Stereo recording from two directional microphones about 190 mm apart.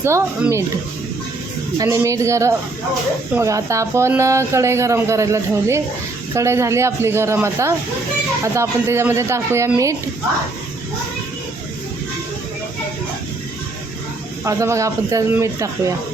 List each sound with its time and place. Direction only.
0.0 s speech: 15° right (ahead or behind)
1.8 s speech: 15° right (ahead or behind)
14.4 s speech: 15° right (ahead or behind)